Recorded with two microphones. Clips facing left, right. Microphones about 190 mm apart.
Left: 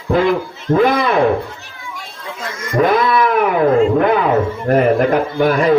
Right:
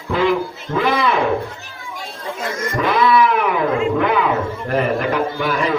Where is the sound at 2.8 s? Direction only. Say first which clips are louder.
Left 2 dB; 45° left (ahead or behind).